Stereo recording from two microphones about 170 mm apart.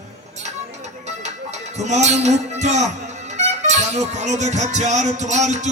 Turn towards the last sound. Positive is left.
turn(degrees=-45)  # may be behind; listen again after turning